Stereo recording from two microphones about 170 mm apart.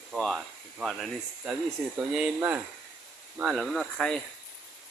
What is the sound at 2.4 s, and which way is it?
Speech, 15° right (ahead or behind).